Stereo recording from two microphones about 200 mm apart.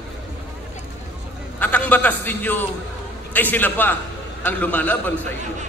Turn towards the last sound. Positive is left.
turn(degrees=10)  # may be behind; listen again after turning